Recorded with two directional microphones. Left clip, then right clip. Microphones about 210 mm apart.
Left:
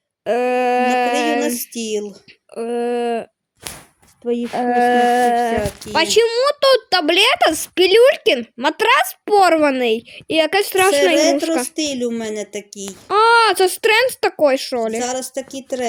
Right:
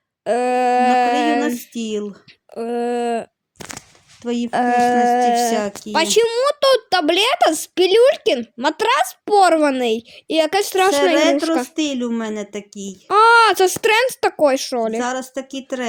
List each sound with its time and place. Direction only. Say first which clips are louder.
0.3 s a sound: even; centre (ahead or behind)
1.4 s a sound: left 1 dB; 50° right (ahead or behind)
2.5 s speech: left 1 dB; 5° right (ahead or behind)
4.2 s speech: left 3 dB; 45° right (ahead or behind)
4.8 s a sound: left 3 dB; 5° left (ahead or behind)
5.9 s speech: left 1 dB; centre (ahead or behind)
11.7 s speech: left 1 dB; 45° right (ahead or behind)
12.9 s speech: right 1 dB; 5° right (ahead or behind)
14.9 s speech: even; 45° right (ahead or behind)